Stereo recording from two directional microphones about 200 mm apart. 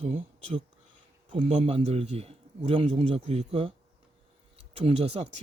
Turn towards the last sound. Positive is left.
turn(degrees=-30)  # may be behind; listen again after turning